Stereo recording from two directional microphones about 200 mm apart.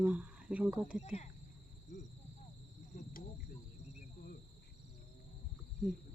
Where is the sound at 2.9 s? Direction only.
45° left (ahead or behind).